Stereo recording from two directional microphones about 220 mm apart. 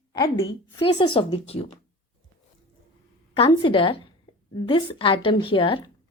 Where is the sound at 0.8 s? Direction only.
20° left (ahead or behind).